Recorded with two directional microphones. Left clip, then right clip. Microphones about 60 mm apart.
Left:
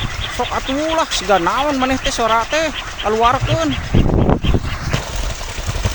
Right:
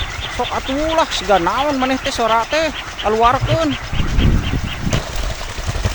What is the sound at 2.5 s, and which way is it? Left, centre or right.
Speech, centre.